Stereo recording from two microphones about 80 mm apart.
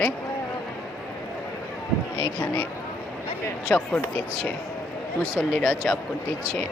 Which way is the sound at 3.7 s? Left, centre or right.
Centre.